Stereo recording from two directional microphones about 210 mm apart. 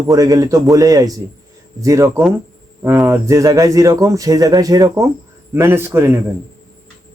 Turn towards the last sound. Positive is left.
turn(degrees=-10)  # may be behind; listen again after turning